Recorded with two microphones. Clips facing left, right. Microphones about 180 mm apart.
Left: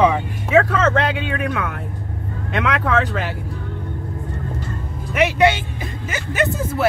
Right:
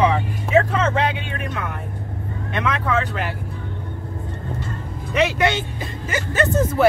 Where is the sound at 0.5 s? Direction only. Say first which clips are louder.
Left 2 dB; 90° left.